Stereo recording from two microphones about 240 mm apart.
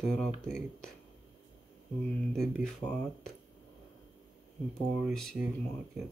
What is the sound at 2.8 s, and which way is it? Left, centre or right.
Speech, centre.